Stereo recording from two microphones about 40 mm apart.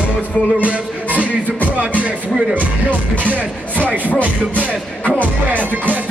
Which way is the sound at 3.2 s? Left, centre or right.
Right.